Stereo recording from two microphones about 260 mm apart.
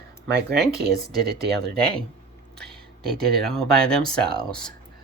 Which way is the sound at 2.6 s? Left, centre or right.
Centre.